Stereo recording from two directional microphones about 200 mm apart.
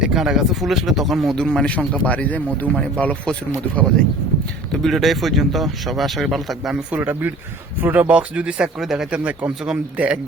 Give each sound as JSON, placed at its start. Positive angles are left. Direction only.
{"t": 0.0, "sound": "speech", "side_deg": -5}
{"t": 4.7, "sound": "speech", "side_deg": 0}